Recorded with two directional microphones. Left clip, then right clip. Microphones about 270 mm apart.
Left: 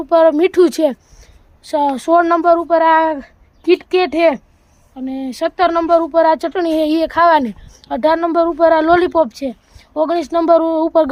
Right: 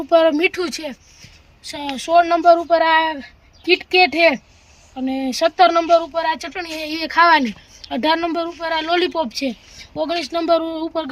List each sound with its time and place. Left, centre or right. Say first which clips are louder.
0.1 s speech: left 3 dB; centre
6.4 s speech: left 11 dB; left